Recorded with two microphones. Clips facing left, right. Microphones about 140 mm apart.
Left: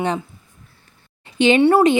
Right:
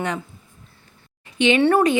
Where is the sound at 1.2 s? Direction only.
35° left (ahead or behind).